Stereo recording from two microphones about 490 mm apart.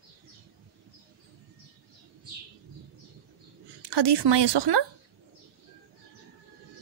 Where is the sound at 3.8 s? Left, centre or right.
Right.